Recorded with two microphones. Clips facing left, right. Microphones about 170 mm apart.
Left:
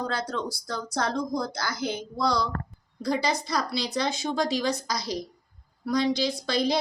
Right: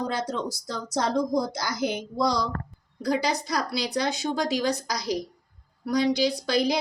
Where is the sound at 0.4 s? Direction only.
45° right (ahead or behind).